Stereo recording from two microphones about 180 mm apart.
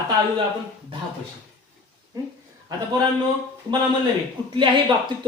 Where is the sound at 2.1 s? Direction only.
20° right (ahead or behind).